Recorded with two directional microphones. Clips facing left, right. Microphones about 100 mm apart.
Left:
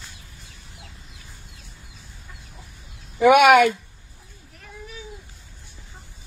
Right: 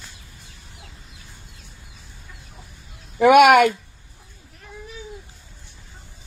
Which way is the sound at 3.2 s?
55° right (ahead or behind).